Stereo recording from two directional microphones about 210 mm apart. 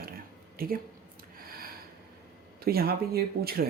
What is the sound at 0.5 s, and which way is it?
Speech, 45° right (ahead or behind).